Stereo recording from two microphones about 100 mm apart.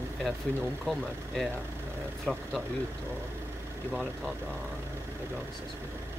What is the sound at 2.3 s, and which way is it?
Speech, centre (ahead or behind).